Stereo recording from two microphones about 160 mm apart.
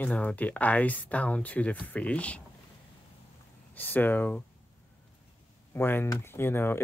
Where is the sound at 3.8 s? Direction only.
10° left (ahead or behind).